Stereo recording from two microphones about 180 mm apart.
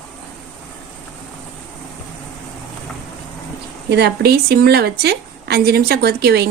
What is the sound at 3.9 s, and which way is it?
A woman's voice, 65° right (ahead or behind).